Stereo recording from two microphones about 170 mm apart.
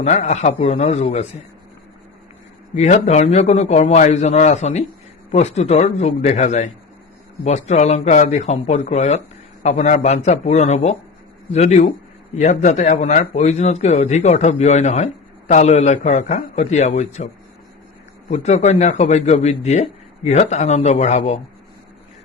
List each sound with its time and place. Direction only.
0.0 s speech: 40° left (ahead or behind)
2.7 s speech: 40° left (ahead or behind)
18.3 s speech: 40° left (ahead or behind)